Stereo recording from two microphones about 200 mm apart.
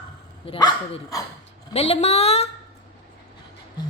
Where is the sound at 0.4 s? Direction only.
25° left (ahead or behind).